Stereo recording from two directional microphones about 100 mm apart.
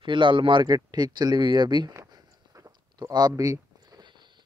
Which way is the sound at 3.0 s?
45° right (ahead or behind).